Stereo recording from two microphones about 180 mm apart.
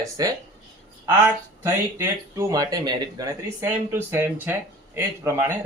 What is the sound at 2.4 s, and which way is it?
A man's voice, 20° right (ahead or behind).